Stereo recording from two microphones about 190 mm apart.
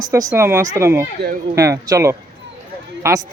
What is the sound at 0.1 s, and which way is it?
Speech, 15° right (ahead or behind).